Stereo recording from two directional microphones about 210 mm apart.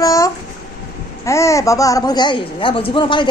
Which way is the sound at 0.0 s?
15° left (ahead or behind).